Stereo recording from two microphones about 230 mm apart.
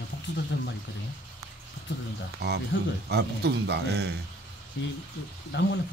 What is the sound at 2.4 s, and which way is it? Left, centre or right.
Speech, right.